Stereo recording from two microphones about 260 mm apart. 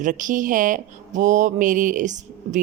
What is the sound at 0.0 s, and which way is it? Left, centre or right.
Speech, right.